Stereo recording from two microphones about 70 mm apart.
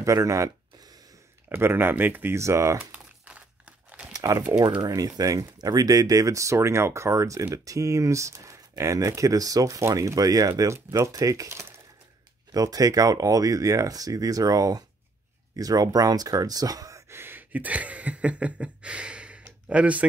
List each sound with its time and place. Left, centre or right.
0.0 s speech: right
1.5 s speech: right
2.3 s speech: right
2.8 s crumpling: centre
4.1 s typing: right
4.8 s speech: right
17.1 s a sound: right